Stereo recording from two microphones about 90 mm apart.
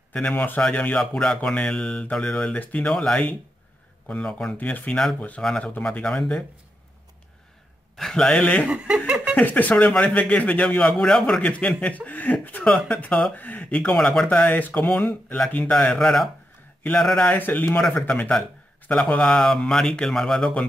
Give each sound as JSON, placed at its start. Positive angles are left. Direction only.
{"t": 0.1, "sound": "speech", "side_deg": 10}
{"t": 7.9, "sound": "speech", "side_deg": 5}
{"t": 8.6, "sound": "chuckle", "side_deg": -10}
{"t": 9.3, "sound": "speech", "side_deg": 20}
{"t": 14.5, "sound": "speech", "side_deg": 20}
{"t": 15.7, "sound": "speech", "side_deg": 5}
{"t": 17.4, "sound": "speech", "side_deg": 20}